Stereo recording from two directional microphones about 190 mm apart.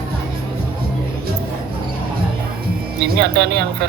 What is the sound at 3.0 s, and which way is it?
Speech, 60° right (ahead or behind).